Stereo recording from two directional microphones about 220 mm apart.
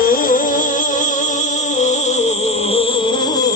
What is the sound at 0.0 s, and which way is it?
Music, 40° left (ahead or behind).